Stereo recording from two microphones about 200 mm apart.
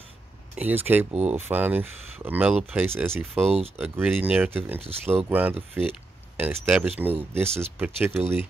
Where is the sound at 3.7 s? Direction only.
10° right (ahead or behind).